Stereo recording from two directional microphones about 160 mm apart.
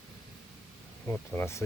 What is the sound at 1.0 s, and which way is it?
Speech, 15° left (ahead or behind).